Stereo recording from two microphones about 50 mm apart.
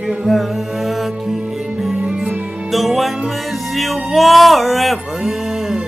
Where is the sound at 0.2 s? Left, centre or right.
Centre.